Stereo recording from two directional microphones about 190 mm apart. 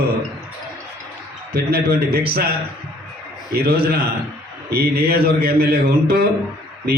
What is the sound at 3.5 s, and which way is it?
A man's voice, 55° right (ahead or behind).